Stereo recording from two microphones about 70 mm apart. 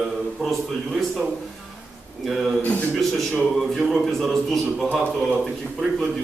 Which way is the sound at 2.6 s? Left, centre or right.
Centre.